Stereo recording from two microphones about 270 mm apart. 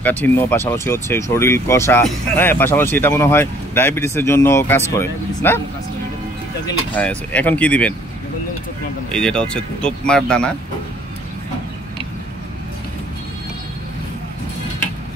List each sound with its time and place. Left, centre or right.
0.0 s speech: centre
7.0 s speech: centre
9.1 s speech: centre